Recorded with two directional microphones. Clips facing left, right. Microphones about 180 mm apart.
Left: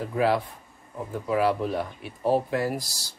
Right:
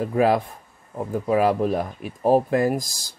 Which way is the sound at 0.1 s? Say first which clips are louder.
Right 3 dB; 50° right (ahead or behind).